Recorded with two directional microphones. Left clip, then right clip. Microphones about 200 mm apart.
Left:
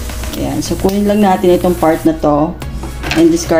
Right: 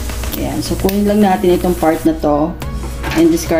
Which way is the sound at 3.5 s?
10° left (ahead or behind).